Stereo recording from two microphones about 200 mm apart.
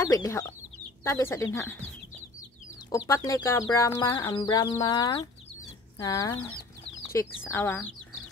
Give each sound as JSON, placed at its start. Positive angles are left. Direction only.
{"t": 0.0, "sound": "speech", "side_deg": 15}
{"t": 3.1, "sound": "speech", "side_deg": 15}